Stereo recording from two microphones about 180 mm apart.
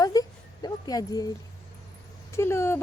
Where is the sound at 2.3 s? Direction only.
15° left (ahead or behind).